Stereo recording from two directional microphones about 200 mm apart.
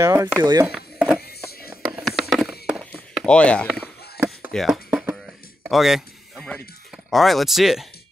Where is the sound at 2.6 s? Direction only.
Centre (ahead or behind).